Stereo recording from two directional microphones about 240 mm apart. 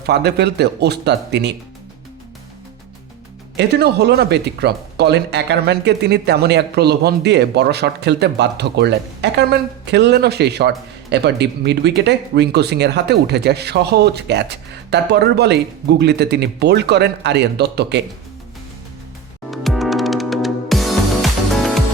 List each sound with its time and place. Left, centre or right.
0.0 s speech: right
3.6 s speech: right
19.5 s music: centre